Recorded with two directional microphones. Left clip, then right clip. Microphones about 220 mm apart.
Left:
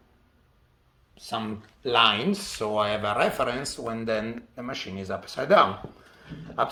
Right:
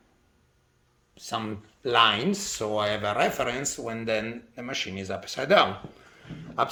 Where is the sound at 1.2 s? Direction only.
40° right (ahead or behind); by 5.7 s 15° right (ahead or behind).